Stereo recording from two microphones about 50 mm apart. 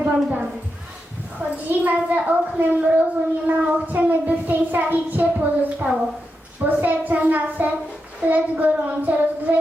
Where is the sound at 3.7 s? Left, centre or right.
Right.